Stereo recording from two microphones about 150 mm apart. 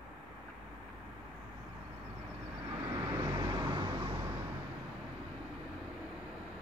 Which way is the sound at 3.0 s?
20° right (ahead or behind).